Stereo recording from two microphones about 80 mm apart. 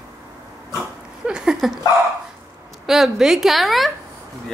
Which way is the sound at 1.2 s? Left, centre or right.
Centre.